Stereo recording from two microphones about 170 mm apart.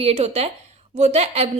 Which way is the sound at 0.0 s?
40° right (ahead or behind).